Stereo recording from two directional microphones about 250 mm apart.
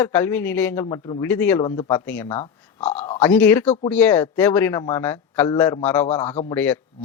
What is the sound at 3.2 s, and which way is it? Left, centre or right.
A man's voice, centre.